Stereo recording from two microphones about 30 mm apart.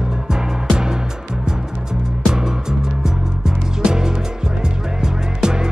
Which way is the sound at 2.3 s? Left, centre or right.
Centre.